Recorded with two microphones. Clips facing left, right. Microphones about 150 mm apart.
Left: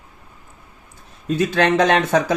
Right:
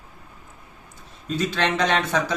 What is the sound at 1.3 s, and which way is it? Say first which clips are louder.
Speech: left 6 dB; 50° left (ahead or behind).